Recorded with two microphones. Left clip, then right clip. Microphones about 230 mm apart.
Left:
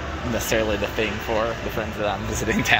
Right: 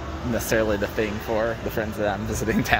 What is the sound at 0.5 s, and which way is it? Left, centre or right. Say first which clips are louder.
Speech: even; right.